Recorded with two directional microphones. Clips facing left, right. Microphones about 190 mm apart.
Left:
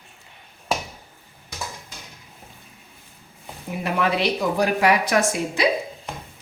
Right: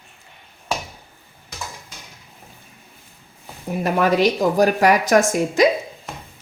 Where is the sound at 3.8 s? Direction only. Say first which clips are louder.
Right 5 dB; 45° right (ahead or behind).